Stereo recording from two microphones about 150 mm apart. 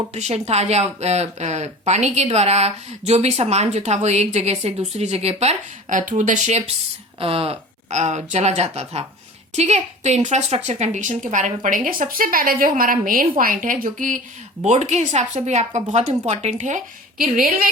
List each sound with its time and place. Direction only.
0.1 s speech: 45° right (ahead or behind)
7.2 s a woman's voice: 40° right (ahead or behind); by 14.2 s 60° right (ahead or behind)
14.6 s speech: 50° right (ahead or behind); by 17.7 s 70° right (ahead or behind)